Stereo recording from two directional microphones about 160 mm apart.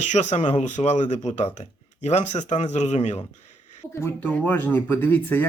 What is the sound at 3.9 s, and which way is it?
Speech, 15° left (ahead or behind).